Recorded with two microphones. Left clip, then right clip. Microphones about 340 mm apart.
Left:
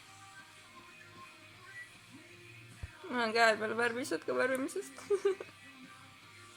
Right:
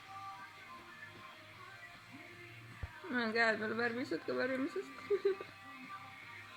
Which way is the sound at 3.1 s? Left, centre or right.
Left.